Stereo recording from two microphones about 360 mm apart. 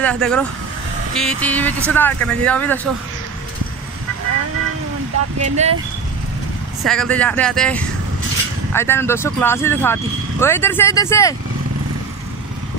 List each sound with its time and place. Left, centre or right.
0.0 s speech: centre
5.4 s speech: centre
6.8 s speech: centre